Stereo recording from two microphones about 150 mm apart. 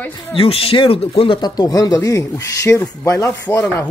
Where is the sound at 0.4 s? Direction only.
40° left (ahead or behind).